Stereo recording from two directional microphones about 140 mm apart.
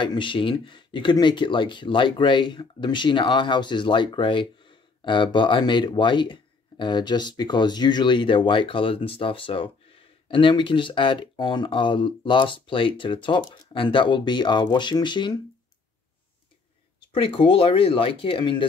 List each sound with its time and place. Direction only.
0.0 s speech: 35° left (ahead or behind)
17.1 s speech: 40° left (ahead or behind)